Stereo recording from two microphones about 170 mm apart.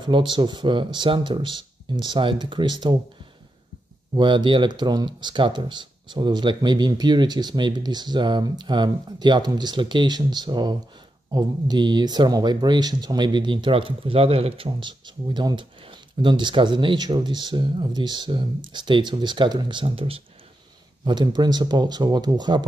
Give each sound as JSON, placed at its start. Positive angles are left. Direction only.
{"t": 0.0, "sound": "speech", "side_deg": -25}
{"t": 4.1, "sound": "speech", "side_deg": -25}